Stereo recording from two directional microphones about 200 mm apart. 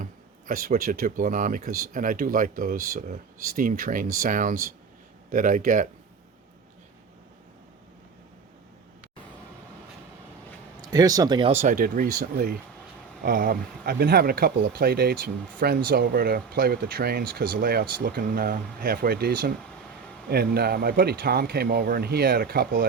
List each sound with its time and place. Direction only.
0.0 s speech: 45° right (ahead or behind)
10.8 s speech: 20° right (ahead or behind)
11.6 s speech: 45° right (ahead or behind)